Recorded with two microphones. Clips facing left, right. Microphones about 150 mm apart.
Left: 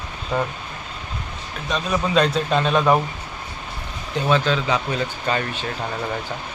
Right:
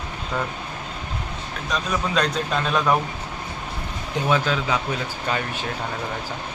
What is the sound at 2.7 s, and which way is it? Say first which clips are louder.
Speech: left 3 dB; 25° left (ahead or behind).